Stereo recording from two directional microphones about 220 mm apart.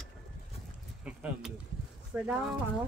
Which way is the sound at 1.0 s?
5° right (ahead or behind).